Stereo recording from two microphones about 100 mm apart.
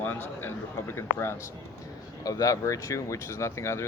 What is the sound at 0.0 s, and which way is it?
Speech, 20° left (ahead or behind).